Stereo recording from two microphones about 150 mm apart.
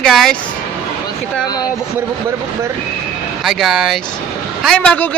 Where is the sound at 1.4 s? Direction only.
25° left (ahead or behind).